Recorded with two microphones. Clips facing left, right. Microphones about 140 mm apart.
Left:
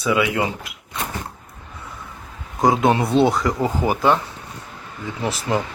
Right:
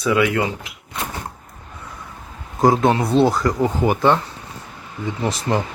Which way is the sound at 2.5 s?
Centre (ahead or behind).